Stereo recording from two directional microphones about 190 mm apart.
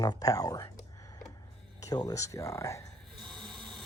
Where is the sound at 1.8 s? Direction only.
20° left (ahead or behind).